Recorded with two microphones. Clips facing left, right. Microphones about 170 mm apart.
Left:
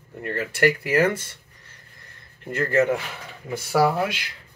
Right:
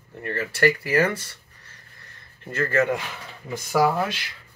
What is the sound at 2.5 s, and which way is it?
Speech, 15° left (ahead or behind).